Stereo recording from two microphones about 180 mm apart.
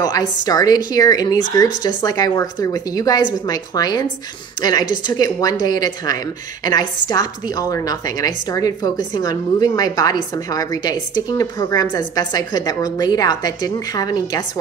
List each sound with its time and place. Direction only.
0.0 s a woman's voice: 20° left (ahead or behind)